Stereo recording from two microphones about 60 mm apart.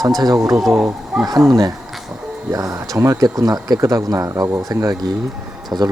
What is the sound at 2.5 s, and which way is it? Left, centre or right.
Speech, right.